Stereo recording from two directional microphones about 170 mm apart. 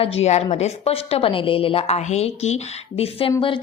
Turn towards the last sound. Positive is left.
turn(degrees=35)  # may be behind; listen again after turning